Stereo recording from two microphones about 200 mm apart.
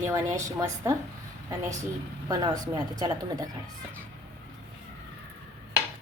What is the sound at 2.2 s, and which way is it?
A woman's voice, 20° right (ahead or behind).